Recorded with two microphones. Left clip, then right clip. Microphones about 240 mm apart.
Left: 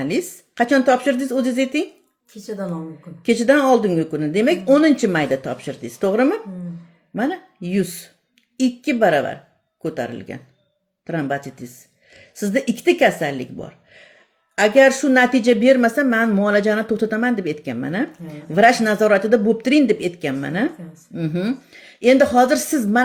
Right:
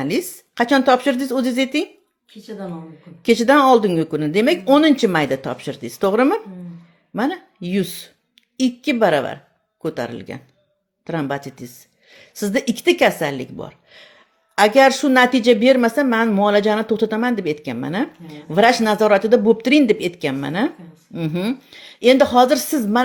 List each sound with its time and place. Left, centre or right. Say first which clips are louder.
0.0 s speech: right 1 dB; right
3.2 s speech: right 2 dB; right